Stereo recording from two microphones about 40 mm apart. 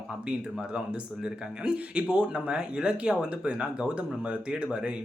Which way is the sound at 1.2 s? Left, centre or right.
Right.